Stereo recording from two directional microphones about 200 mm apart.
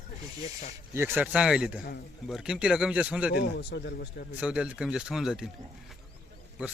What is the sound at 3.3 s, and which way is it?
Speech, 55° left (ahead or behind).